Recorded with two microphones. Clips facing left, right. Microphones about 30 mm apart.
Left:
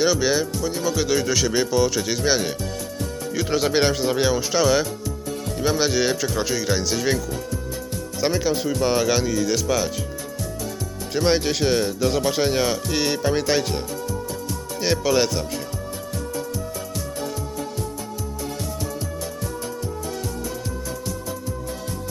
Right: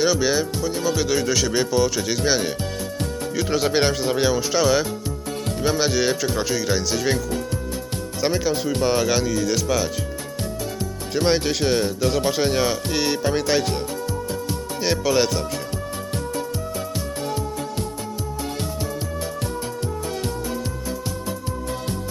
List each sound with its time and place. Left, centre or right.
0.0 s speech: centre
8.4 s speech: centre
11.3 s speech: centre
14.8 s speech: centre